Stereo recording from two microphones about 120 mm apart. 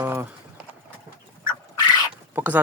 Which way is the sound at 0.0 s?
25° right (ahead or behind).